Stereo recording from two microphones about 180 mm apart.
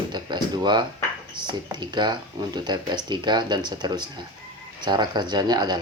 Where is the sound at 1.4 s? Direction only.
25° right (ahead or behind).